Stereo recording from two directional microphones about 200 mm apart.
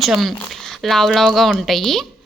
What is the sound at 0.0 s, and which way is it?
Speech, centre (ahead or behind).